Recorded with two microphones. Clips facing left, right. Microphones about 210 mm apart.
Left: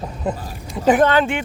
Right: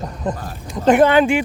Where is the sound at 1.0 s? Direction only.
10° right (ahead or behind).